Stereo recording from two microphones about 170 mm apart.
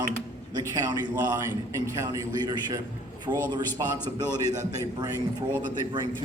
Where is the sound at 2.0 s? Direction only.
20° right (ahead or behind).